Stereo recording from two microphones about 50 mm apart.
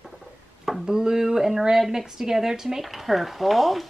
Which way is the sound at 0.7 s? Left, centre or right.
Centre.